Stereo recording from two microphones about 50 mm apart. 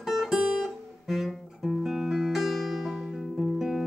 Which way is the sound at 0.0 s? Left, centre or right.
Centre.